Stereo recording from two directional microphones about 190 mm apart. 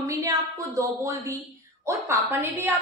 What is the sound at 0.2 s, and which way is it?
A woman's voice, 15° right (ahead or behind).